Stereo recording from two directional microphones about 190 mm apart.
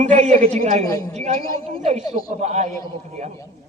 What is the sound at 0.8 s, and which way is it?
Speech, 15° left (ahead or behind).